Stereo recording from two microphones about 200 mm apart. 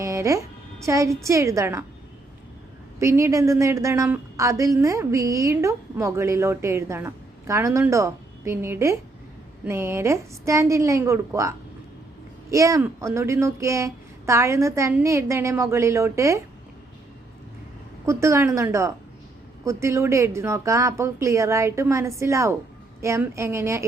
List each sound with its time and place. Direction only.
0.0 s a sound: 15° right (ahead or behind)
0.9 s a woman's voice: 15° right (ahead or behind)
3.0 s a woman's voice: 15° right (ahead or behind)
18.0 s a woman's voice: 15° right (ahead or behind)